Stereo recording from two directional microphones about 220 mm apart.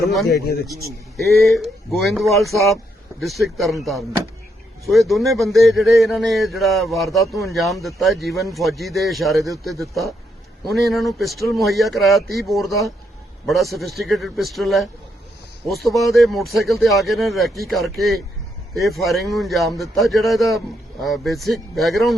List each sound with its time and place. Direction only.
0.0 s speech: centre (ahead or behind)
0.3 s speech: 45° left (ahead or behind)
1.5 s speech: centre (ahead or behind)